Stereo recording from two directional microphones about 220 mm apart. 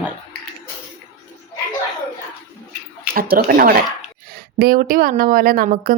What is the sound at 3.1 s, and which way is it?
A woman's voice, 40° right (ahead or behind).